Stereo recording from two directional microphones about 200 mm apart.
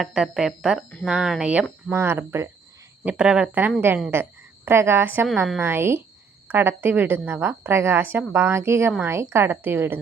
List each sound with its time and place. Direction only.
0.0 s a woman's voice: centre (ahead or behind)